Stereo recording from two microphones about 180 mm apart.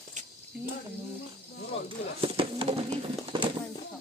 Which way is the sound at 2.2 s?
30° right (ahead or behind).